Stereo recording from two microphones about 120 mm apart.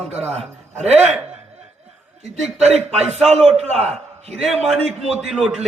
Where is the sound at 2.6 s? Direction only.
65° right (ahead or behind).